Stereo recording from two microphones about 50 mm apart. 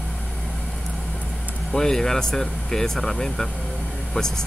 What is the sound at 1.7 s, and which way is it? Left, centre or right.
Speech, centre.